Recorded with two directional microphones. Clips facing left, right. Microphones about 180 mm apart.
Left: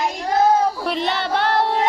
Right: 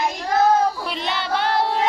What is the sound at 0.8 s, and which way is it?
Child singing, 55° left (ahead or behind).